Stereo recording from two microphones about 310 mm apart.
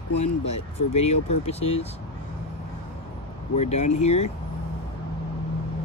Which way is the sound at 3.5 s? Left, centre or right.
Left.